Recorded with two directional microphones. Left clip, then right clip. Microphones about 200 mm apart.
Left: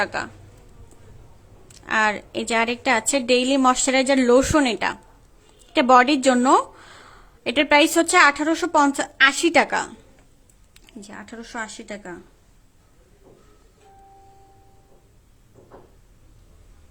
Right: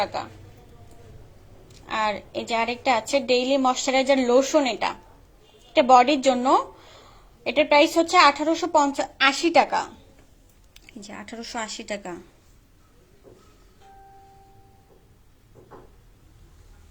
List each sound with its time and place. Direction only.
1.6 s a woman's voice: 35° left (ahead or behind)
11.0 s a woman's voice: 10° left (ahead or behind)